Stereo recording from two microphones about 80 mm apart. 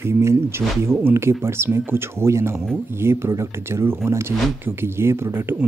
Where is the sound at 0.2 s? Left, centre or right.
Right.